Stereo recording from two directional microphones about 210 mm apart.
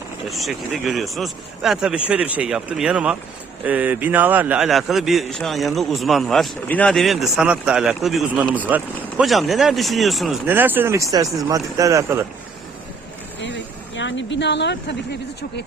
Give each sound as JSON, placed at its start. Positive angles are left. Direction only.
{"t": 0.3, "sound": "a man's voice", "side_deg": 0}
{"t": 13.4, "sound": "speech", "side_deg": 60}